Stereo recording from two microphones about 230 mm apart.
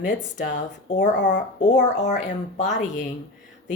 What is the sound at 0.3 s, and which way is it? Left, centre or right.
Speech, left.